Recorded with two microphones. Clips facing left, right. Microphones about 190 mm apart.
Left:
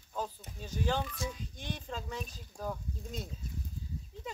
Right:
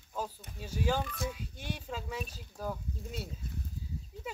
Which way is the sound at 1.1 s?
60° right (ahead or behind).